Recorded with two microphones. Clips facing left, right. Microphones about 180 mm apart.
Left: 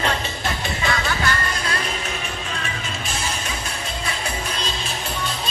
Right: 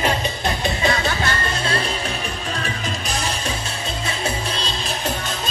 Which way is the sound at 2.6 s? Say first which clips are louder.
Right 3 dB; 40° right (ahead or behind).